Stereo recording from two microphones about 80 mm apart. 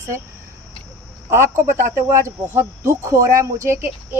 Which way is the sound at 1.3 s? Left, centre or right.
Right.